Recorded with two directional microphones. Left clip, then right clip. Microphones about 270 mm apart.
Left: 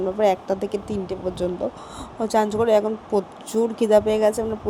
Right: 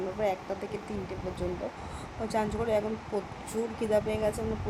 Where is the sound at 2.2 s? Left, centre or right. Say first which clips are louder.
Left 11 dB; left.